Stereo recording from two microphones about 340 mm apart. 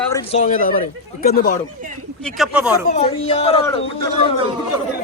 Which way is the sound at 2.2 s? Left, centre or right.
Centre.